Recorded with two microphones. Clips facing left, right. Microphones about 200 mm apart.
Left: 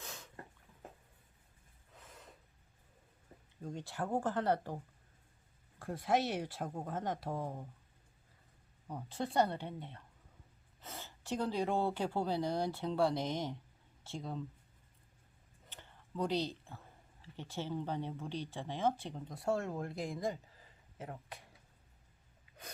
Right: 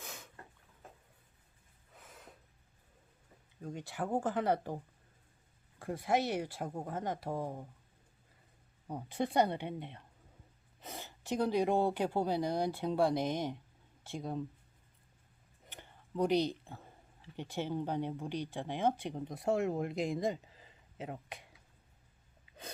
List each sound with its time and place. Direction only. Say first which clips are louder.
0.0 s a sound: right 1 dB; 5° right (ahead or behind)
2.0 s gasp: right 1 dB; centre (ahead or behind)
4.1 s speech: right 1 dB; 15° right (ahead or behind)
5.8 s speech: right 1 dB; 5° right (ahead or behind)
8.9 s speech: right 4 dB; 15° right (ahead or behind)
15.7 s a sound: right 4 dB; 15° right (ahead or behind)
17.3 s speech: right 3 dB; 15° right (ahead or behind)